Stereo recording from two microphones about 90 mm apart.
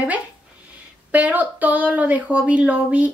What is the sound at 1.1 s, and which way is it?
A woman's voice, 20° right (ahead or behind).